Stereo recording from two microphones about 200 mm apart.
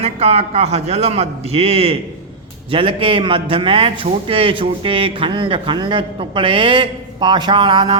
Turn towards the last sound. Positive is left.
turn(degrees=-25)  # may be behind; listen again after turning